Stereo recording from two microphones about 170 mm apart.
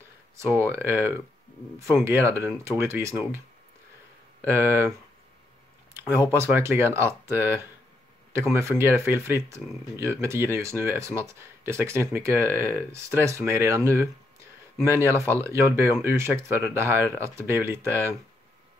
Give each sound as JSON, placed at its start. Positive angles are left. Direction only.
{"t": 0.4, "sound": "speech", "side_deg": -15}
{"t": 4.5, "sound": "speech", "side_deg": -15}
{"t": 5.9, "sound": "speech", "side_deg": -15}